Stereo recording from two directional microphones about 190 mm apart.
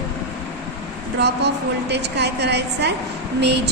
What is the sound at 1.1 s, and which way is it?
A woman's voice, 60° right (ahead or behind).